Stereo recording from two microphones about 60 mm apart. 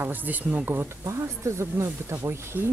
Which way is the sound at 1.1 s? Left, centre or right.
Right.